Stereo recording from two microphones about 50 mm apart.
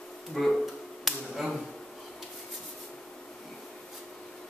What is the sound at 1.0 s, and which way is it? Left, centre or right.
Finger snapping, centre.